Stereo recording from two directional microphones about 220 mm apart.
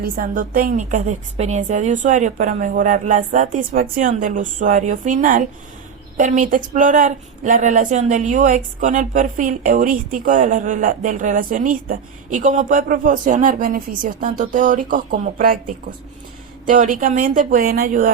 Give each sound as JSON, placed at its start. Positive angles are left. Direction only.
{"t": 0.0, "sound": "a woman's voice", "side_deg": -40}
{"t": 16.6, "sound": "a woman's voice", "side_deg": -40}